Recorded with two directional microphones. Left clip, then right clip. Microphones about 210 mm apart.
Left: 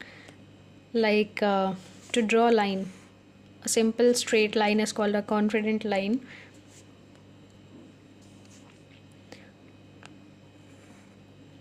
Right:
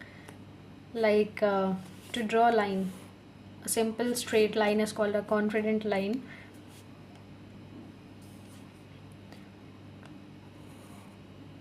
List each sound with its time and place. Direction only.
0.9 s a woman's voice: 45° left (ahead or behind)